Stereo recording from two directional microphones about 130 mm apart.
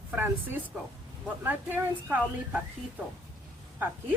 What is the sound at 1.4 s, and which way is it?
A woman's voice, 15° right (ahead or behind).